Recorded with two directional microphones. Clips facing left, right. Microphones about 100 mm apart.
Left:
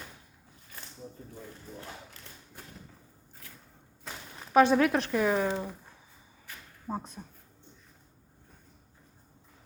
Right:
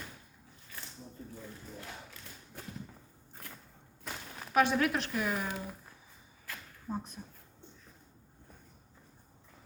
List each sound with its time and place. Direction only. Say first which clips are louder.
4.5 s a woman's voice: left 6 dB; 30° left (ahead or behind)
5.3 s speech: left 8 dB; 25° left (ahead or behind)
6.5 s a sound: right 3 dB; 90° right
6.9 s a woman's voice: left 3 dB; 35° left (ahead or behind)